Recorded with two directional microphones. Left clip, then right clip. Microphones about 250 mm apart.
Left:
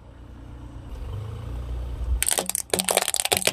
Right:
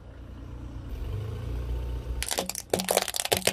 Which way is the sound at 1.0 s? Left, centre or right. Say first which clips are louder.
Right 1 dB; right.